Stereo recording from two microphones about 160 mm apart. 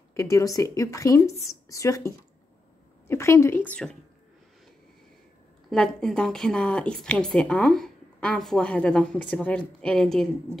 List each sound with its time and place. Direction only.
0.1 s a woman's voice: 20° left (ahead or behind)
5.7 s a woman's voice: 5° left (ahead or behind)